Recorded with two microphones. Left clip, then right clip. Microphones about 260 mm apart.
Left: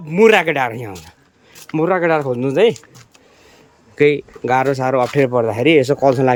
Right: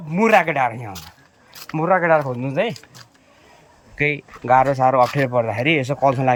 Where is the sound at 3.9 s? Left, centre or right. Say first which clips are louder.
Left 7 dB; centre.